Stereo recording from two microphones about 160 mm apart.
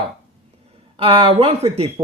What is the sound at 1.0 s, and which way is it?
Speech, 35° right (ahead or behind).